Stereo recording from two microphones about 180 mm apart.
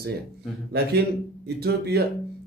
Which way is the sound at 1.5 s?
65° right (ahead or behind).